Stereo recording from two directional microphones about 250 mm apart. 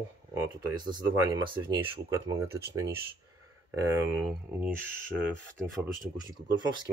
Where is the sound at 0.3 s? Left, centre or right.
Centre.